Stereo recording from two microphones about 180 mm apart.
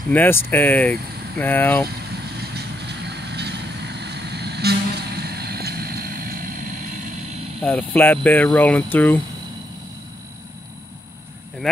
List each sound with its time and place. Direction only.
0.1 s speech: 10° left (ahead or behind)
2.5 s vehicle: 65° right (ahead or behind)
7.6 s speech: 10° left (ahead or behind)